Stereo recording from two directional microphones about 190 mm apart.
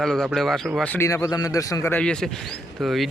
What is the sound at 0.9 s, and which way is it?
Speech, 15° left (ahead or behind).